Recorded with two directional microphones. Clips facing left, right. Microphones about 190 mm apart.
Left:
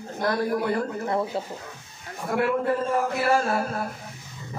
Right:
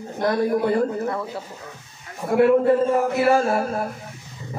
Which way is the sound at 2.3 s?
25° right (ahead or behind).